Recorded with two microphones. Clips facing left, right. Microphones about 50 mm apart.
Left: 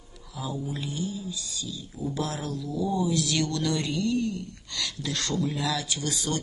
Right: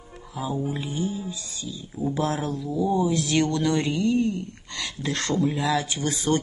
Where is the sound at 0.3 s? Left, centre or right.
Right.